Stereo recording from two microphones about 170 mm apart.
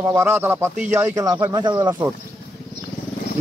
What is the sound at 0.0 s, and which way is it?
Speech, 15° right (ahead or behind).